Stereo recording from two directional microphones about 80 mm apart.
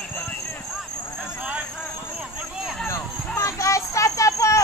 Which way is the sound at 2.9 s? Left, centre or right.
Left.